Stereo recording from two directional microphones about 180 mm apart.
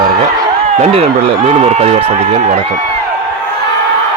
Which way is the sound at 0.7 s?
35° right (ahead or behind).